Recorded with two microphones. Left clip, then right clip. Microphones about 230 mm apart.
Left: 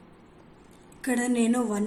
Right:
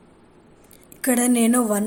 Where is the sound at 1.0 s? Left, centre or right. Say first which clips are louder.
Right 6 dB; right.